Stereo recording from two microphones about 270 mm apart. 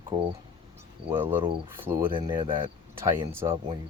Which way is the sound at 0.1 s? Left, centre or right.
Centre.